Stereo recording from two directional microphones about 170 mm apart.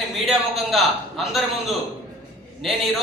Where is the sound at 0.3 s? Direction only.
Centre (ahead or behind).